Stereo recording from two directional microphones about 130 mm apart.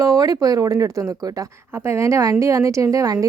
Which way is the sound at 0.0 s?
30° right (ahead or behind).